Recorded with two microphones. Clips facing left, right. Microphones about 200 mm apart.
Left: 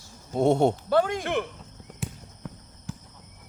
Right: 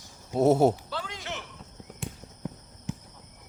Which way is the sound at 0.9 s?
55° left (ahead or behind).